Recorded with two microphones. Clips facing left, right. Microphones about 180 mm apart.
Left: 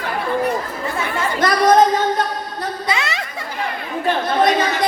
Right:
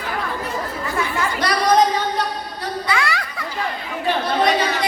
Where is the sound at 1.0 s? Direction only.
50° left (ahead or behind).